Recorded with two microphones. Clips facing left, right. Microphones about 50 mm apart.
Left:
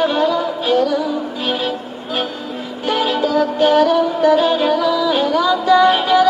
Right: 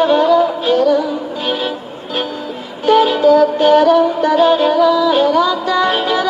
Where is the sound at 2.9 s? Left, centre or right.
Centre.